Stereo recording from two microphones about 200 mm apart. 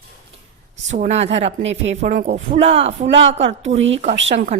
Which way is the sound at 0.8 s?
35° right (ahead or behind).